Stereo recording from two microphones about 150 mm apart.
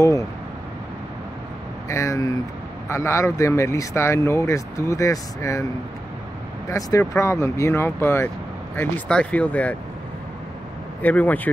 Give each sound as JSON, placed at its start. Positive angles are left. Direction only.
{"t": 0.0, "sound": "speech", "side_deg": 20}
{"t": 1.9, "sound": "speech", "side_deg": 20}
{"t": 6.7, "sound": "speech", "side_deg": 20}
{"t": 11.0, "sound": "speech", "side_deg": 10}